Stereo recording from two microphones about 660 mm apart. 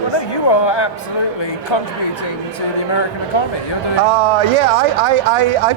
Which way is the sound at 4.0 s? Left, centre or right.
Right.